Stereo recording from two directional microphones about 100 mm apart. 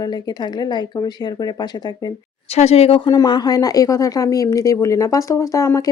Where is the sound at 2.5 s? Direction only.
90° left.